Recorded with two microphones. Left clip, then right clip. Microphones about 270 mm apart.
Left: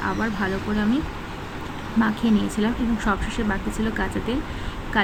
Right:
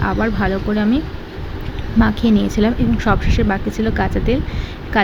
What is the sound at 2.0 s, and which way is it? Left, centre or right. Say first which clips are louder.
Speech: right 6 dB; centre.